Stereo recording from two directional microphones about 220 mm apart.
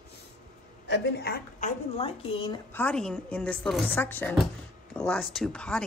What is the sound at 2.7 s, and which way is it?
Speech, 5° left (ahead or behind).